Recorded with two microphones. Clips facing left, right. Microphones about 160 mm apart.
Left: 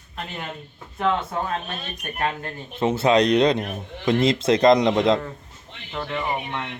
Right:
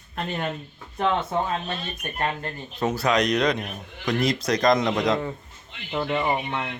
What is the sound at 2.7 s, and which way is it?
Speech, 25° left (ahead or behind).